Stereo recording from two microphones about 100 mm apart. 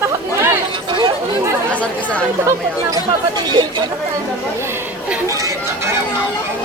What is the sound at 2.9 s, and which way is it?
Speech, 45° right (ahead or behind).